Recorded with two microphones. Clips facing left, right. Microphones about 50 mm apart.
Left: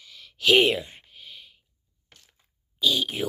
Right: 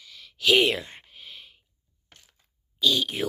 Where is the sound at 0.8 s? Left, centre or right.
Centre.